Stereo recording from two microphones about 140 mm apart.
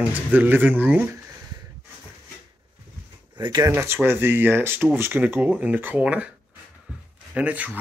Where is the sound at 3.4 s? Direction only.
35° right (ahead or behind).